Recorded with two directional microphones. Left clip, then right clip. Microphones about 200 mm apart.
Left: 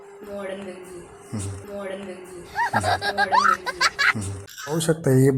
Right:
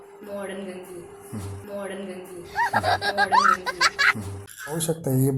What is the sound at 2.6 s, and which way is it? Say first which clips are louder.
Speech: even; centre (ahead or behind).